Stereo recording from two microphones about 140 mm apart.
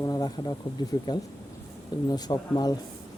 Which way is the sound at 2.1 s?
30° left (ahead or behind).